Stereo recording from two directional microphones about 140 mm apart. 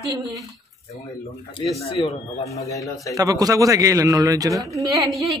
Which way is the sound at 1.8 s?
45° left (ahead or behind).